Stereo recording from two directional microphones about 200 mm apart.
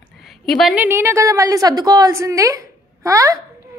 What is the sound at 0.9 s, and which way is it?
A woman's voice, 10° right (ahead or behind).